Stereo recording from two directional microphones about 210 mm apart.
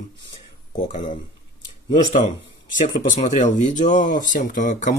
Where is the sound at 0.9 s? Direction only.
35° left (ahead or behind).